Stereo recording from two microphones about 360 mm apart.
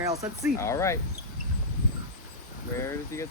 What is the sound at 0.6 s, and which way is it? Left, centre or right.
Speech, centre.